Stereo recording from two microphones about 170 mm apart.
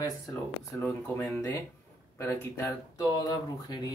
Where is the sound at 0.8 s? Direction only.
5° left (ahead or behind).